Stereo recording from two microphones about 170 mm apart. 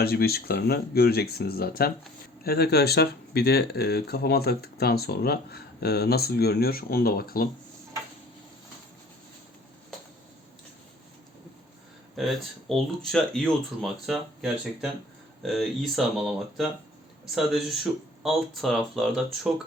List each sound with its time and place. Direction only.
0.0 s speech: 65° left (ahead or behind)
12.1 s speech: centre (ahead or behind)